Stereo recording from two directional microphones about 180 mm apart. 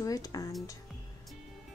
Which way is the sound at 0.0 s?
20° left (ahead or behind).